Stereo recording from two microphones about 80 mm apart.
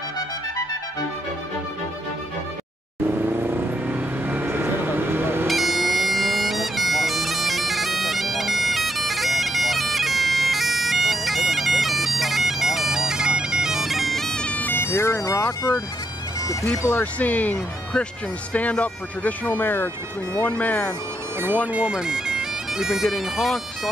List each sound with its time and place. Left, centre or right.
3.3 s vehicle: right
5.5 s bagpipes: centre; by 15.5 s left
16.8 s speech: centre
21.7 s speech: centre